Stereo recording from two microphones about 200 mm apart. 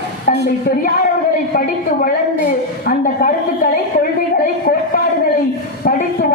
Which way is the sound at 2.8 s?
45° left (ahead or behind).